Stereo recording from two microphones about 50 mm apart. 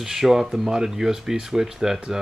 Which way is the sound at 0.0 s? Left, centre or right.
Centre.